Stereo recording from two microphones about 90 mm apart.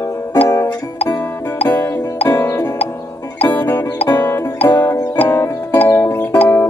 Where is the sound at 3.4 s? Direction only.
20° left (ahead or behind); by 6.5 s 40° left (ahead or behind).